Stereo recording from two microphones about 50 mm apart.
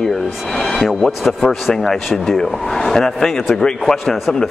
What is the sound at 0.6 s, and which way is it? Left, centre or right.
Speech, centre.